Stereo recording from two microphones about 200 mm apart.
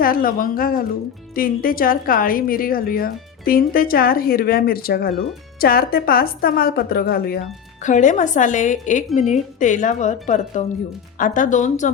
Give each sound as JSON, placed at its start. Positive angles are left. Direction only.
{"t": 0.0, "sound": "a woman's voice", "side_deg": 45}
{"t": 7.9, "sound": "speech", "side_deg": 40}